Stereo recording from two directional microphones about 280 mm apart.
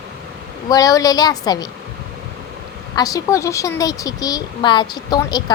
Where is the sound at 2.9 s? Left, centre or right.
Centre.